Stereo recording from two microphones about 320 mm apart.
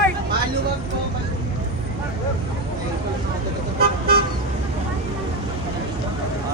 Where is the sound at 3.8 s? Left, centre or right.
Right.